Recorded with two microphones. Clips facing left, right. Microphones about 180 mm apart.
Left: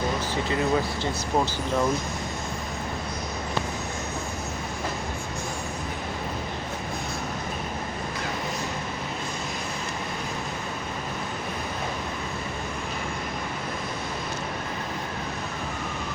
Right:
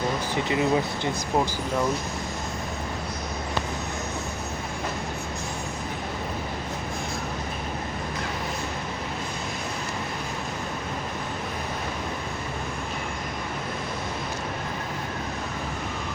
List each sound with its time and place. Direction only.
0.4 s speech: 20° right (ahead or behind)